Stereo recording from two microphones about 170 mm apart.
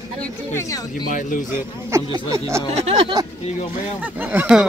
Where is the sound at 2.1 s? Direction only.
15° right (ahead or behind).